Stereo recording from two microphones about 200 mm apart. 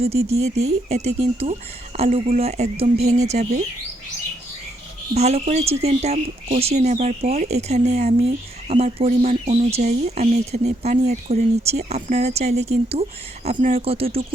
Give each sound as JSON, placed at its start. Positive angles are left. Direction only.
{"t": 0.0, "sound": "speech", "side_deg": -30}
{"t": 5.1, "sound": "speech", "side_deg": -30}